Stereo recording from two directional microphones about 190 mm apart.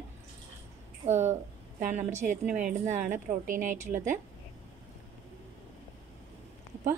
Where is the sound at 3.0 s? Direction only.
45° right (ahead or behind).